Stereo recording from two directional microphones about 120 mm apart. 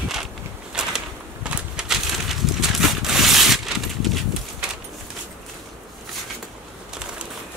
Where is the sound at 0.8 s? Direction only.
10° right (ahead or behind).